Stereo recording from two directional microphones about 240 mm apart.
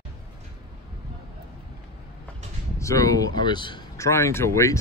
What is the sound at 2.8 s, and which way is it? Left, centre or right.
Speech, centre.